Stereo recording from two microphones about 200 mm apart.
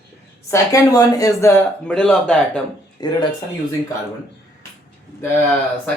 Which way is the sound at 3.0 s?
20° left (ahead or behind).